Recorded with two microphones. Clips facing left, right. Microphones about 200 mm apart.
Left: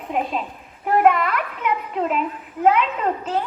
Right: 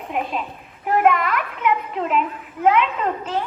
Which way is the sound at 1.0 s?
35° left (ahead or behind).